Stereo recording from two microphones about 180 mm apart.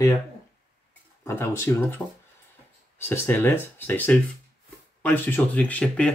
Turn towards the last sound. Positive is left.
turn(degrees=5)  # may be behind; listen again after turning